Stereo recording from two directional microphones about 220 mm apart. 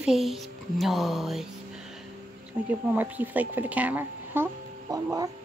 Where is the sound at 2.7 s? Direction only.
5° right (ahead or behind).